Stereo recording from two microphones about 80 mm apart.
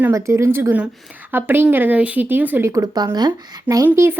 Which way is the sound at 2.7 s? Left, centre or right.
Right.